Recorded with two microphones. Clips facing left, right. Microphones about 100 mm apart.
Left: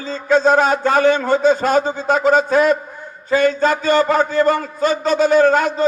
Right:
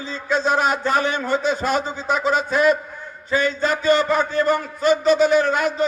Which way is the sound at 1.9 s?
55° left (ahead or behind).